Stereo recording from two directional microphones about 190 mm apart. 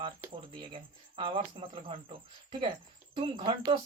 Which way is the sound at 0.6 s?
25° right (ahead or behind).